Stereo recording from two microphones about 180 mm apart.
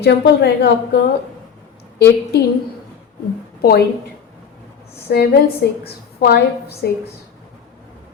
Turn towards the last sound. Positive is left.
turn(degrees=60)  # may be behind; listen again after turning